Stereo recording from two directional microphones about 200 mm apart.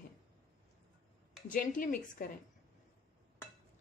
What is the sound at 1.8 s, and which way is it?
Speech, 45° left (ahead or behind).